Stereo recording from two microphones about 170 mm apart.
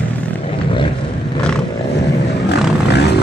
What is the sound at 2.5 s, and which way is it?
Vehicle, 80° left.